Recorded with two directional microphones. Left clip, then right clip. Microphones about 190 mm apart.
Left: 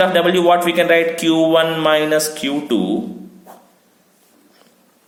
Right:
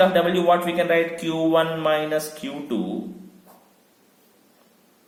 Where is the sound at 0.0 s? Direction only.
40° left (ahead or behind).